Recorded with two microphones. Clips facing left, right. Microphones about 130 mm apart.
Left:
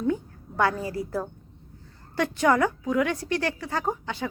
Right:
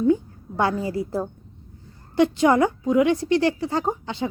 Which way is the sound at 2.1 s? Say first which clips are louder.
Right 5 dB; 20° right (ahead or behind).